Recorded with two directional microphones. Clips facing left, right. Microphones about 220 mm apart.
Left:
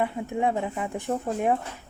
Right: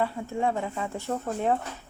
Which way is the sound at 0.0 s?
15° left (ahead or behind).